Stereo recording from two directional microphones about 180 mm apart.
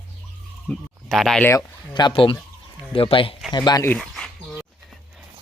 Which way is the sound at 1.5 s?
20° left (ahead or behind).